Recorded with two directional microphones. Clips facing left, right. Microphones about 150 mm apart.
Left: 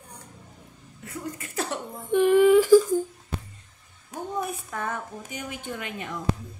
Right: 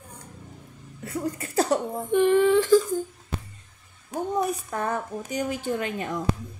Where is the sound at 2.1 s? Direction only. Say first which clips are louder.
Left 2 dB; 5° left (ahead or behind).